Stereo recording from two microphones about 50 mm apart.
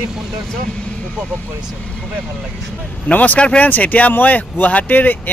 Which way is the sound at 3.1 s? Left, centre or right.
Left.